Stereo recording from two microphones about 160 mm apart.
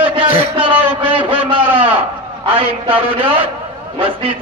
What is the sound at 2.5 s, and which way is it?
Speech, 35° right (ahead or behind).